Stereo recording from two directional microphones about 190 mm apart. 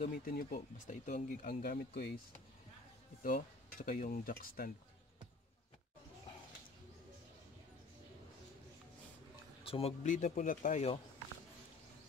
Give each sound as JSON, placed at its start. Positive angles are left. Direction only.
{"t": 0.0, "sound": "speech", "side_deg": 50}
{"t": 3.2, "sound": "speech", "side_deg": 45}
{"t": 9.7, "sound": "speech", "side_deg": 30}